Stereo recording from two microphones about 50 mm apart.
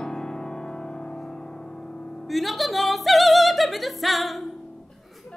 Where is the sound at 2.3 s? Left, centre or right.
Centre.